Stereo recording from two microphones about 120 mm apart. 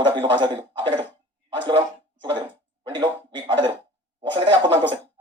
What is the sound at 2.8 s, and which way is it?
Cough, 40° right (ahead or behind).